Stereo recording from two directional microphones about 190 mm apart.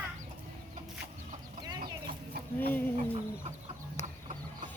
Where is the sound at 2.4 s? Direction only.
55° right (ahead or behind).